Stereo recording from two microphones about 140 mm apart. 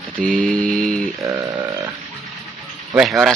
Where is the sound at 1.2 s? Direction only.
25° right (ahead or behind).